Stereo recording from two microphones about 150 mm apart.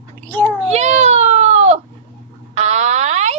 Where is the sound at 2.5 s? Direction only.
45° right (ahead or behind).